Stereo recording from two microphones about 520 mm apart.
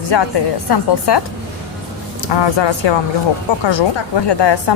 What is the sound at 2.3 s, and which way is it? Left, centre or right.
Speech, left.